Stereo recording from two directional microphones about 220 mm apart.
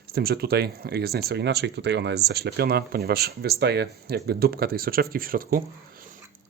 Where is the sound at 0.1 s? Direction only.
45° right (ahead or behind).